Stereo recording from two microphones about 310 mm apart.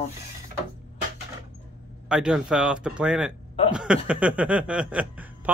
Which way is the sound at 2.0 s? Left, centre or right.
Centre.